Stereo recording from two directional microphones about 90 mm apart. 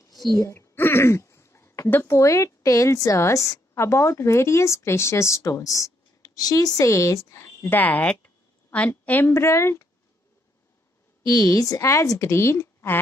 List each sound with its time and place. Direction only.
0.4 s a woman's voice: 30° left (ahead or behind)
9.3 s speech: 30° left (ahead or behind)
11.2 s speech: 45° left (ahead or behind); by 13.0 s 25° left (ahead or behind)